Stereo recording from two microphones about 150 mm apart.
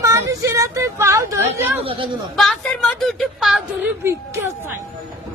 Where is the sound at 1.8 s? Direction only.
40° right (ahead or behind).